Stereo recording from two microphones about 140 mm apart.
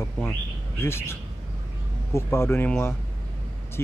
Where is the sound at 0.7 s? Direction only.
20° left (ahead or behind).